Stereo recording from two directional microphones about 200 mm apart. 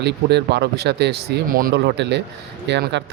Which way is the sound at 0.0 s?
55° right (ahead or behind).